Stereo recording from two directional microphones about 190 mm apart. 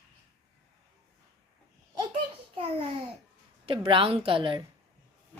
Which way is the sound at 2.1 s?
30° right (ahead or behind).